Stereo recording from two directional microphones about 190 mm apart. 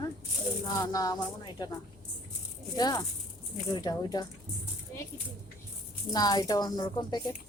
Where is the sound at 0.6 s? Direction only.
20° left (ahead or behind).